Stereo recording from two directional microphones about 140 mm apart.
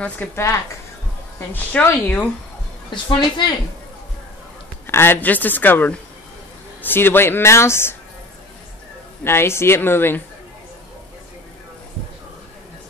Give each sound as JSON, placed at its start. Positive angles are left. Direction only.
{"t": 0.2, "sound": "speech", "side_deg": 10}
{"t": 1.5, "sound": "speech", "side_deg": 15}
{"t": 2.9, "sound": "a woman's voice", "side_deg": 35}
{"t": 4.8, "sound": "speech", "side_deg": 15}
{"t": 9.2, "sound": "speech", "side_deg": 15}